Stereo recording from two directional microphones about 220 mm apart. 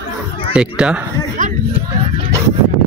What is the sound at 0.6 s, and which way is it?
Speech, 5° right (ahead or behind).